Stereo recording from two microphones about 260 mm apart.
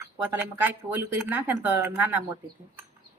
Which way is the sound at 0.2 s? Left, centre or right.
Centre.